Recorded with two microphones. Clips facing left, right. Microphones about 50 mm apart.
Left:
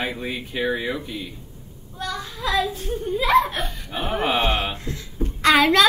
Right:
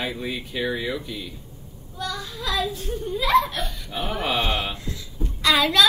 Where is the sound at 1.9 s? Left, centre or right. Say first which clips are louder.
Left 1 dB; left.